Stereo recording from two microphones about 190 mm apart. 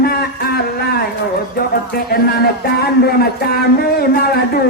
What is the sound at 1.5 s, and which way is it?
Speech, 55° left (ahead or behind).